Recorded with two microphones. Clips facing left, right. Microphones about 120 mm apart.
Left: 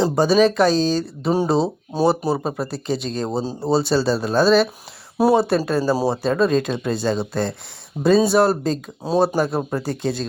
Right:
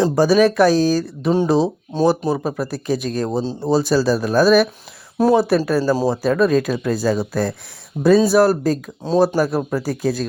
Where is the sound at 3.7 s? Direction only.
25° left (ahead or behind).